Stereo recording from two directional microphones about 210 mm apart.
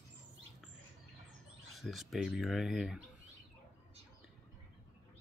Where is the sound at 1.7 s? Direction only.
Centre (ahead or behind).